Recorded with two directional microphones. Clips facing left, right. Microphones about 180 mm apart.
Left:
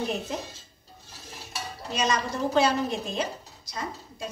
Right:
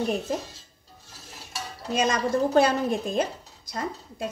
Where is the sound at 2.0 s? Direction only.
55° right (ahead or behind).